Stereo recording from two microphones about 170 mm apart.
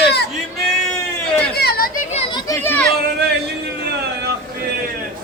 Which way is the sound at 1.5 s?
65° left (ahead or behind).